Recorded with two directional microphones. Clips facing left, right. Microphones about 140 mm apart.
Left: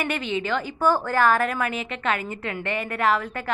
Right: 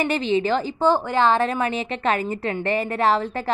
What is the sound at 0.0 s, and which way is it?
A woman's voice, 30° right (ahead or behind).